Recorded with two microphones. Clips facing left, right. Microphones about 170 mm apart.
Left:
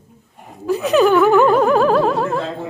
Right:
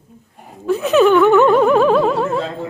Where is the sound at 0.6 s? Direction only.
Centre (ahead or behind).